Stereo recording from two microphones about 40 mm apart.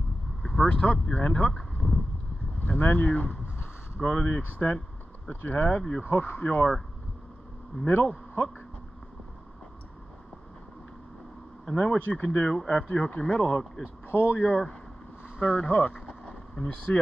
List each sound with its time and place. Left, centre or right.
0.4 s vehicle: centre
0.7 s speech: left
1.5 s a sound: centre
2.6 s speech: left
3.2 s boat: left
4.4 s speech: left
5.7 s speech: left
6.0 s speech: left
7.8 s speech: left
11.6 s speech: left
14.0 s speech: left
15.2 s vehicle: left
15.7 s speech: left
16.1 s a sound: left